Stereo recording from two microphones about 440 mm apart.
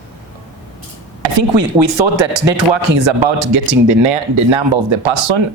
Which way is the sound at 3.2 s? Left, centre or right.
Right.